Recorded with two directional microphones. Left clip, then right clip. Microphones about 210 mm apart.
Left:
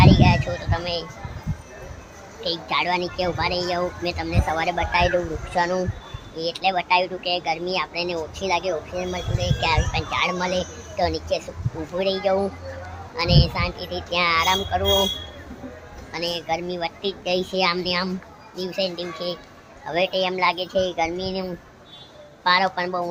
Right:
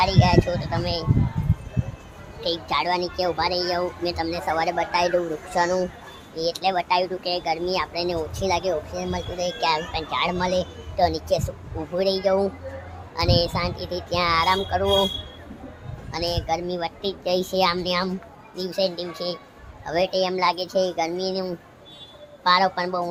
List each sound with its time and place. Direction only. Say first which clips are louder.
0.0 s speech: left 1 dB; 10° right (ahead or behind)
2.4 s speech: even; 15° right (ahead or behind)
16.1 s speech: even; 15° right (ahead or behind)